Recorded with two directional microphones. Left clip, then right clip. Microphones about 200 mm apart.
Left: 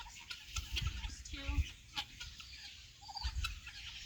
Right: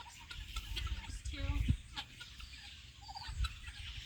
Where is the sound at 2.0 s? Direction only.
20° left (ahead or behind).